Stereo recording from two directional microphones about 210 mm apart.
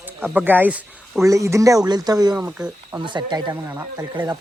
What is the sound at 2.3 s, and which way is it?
Speech, 5° right (ahead or behind).